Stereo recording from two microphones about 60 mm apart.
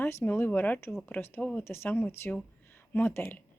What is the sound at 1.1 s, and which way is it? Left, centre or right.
Speech, left.